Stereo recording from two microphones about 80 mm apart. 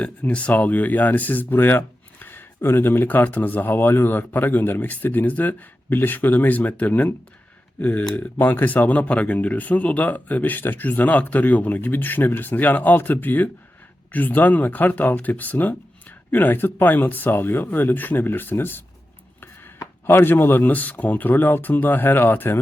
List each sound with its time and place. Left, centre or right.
0.0 s speech: centre
20.1 s speech: left